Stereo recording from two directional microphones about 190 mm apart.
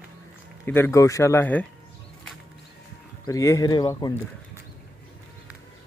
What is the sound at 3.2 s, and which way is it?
Speech, 15° left (ahead or behind).